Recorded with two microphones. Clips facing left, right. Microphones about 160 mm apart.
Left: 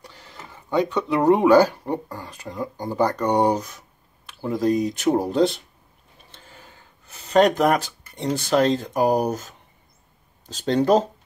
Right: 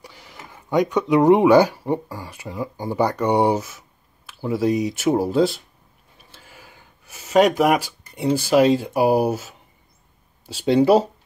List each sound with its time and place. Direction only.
0.0 s speech: 10° right (ahead or behind)